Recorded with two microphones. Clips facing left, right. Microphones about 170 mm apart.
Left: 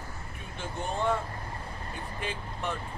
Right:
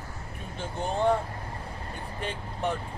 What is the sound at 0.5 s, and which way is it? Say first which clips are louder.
Speech: right 3 dB; 35° right (ahead or behind).